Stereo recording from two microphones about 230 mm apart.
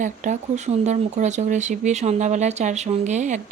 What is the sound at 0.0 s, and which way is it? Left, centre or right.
Speech, right.